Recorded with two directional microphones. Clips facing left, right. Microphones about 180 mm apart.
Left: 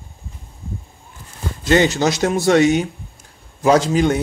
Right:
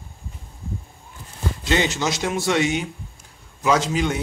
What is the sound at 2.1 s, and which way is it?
A man's voice, 40° left (ahead or behind).